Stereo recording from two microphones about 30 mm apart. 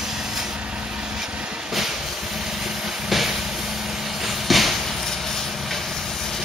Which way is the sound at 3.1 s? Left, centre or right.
Centre.